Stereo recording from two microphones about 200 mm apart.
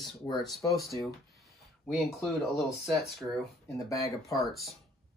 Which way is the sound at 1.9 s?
Centre (ahead or behind).